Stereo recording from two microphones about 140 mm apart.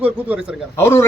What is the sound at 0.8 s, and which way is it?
Speech, 20° left (ahead or behind).